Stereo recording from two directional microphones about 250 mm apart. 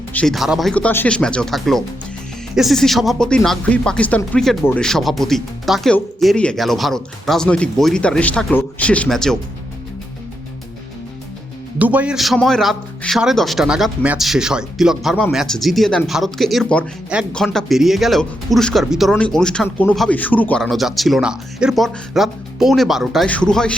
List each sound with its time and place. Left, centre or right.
0.1 s speech: centre
11.8 s speech: centre